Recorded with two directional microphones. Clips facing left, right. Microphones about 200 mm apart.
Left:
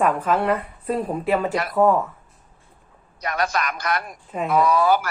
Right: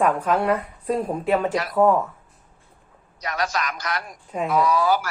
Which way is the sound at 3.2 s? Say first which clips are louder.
Left 2 dB; 55° left (ahead or behind).